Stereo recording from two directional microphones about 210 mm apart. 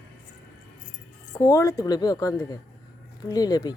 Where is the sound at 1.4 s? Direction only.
15° left (ahead or behind).